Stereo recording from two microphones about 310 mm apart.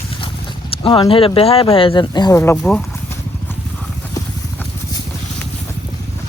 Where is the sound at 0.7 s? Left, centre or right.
Centre.